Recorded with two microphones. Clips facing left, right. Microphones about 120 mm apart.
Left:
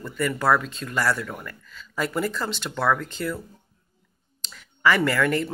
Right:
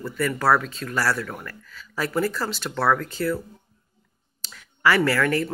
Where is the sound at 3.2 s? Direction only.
15° left (ahead or behind).